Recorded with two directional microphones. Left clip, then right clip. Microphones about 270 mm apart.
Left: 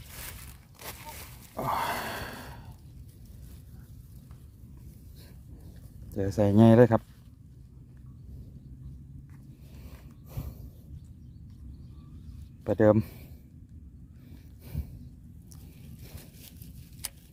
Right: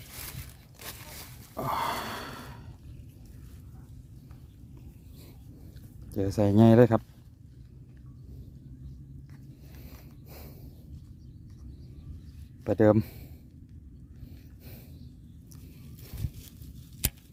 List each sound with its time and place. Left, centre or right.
0.8 s a sound: centre
6.1 s speech: centre
9.8 s snort: centre
12.6 s speech: centre